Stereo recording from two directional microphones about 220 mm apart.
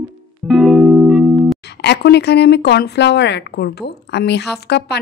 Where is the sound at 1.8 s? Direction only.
50° left (ahead or behind).